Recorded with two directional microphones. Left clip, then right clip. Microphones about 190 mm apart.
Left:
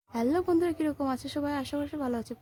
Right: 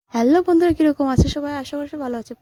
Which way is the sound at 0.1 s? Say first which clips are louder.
Right 11 dB; 40° right (ahead or behind).